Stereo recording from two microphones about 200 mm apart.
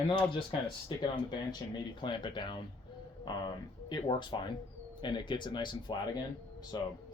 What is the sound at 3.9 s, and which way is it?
Speech, 20° left (ahead or behind).